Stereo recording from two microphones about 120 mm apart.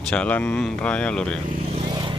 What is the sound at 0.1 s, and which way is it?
Speech, 10° left (ahead or behind).